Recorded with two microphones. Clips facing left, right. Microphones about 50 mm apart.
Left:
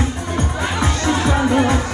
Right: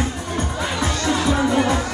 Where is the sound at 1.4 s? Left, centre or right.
Centre.